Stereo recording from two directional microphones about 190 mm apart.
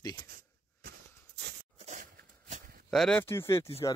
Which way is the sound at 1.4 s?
65° right (ahead or behind).